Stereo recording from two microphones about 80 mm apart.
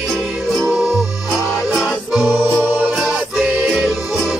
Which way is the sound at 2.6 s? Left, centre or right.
Right.